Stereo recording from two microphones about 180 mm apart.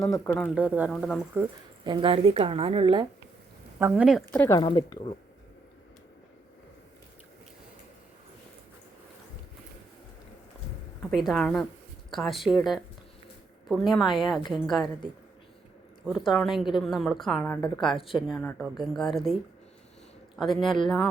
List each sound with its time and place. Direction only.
0.0 s a woman's voice: 5° left (ahead or behind)
0.5 s speech: 10° right (ahead or behind)
0.9 s a woman's voice: centre (ahead or behind)
1.8 s speech: 25° right (ahead or behind)
3.8 s a woman's voice: 10° right (ahead or behind)
4.3 s speech: 10° left (ahead or behind)
4.5 s speech: 25° left (ahead or behind)
11.1 s a woman's voice: centre (ahead or behind)
16.0 s a woman's voice: 5° right (ahead or behind)
20.3 s a man's voice: centre (ahead or behind)